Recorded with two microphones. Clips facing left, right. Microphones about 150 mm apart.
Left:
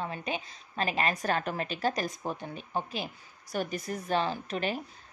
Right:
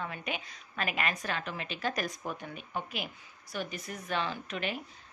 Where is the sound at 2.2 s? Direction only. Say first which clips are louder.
Left 3 dB; 30° left (ahead or behind).